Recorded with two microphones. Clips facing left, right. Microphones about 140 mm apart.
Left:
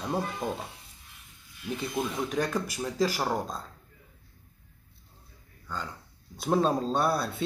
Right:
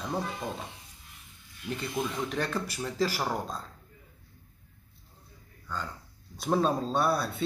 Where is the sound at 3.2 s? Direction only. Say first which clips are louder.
Left 2 dB; centre (ahead or behind).